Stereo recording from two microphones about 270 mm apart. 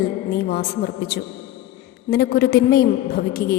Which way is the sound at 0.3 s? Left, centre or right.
Left.